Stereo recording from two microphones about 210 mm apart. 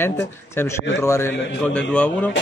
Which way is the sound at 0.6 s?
10° left (ahead or behind).